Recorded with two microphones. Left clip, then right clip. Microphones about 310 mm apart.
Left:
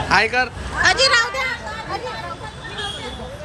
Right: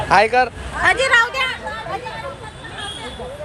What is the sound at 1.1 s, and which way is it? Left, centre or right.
Hubbub, right.